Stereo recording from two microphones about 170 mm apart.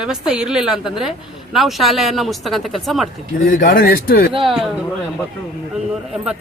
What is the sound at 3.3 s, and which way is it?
Speech, 50° left (ahead or behind).